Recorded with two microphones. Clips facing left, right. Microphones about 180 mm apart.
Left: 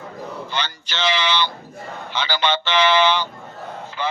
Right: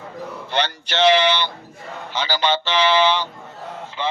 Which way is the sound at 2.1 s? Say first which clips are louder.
Right 1 dB; 40° right (ahead or behind).